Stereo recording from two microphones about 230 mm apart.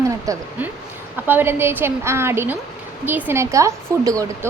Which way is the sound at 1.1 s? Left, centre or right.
Centre.